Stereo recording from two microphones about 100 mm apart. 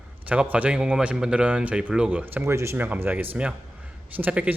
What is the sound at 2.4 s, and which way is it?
A man's voice, 25° right (ahead or behind).